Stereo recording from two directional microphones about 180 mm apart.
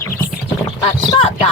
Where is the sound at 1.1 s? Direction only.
30° left (ahead or behind).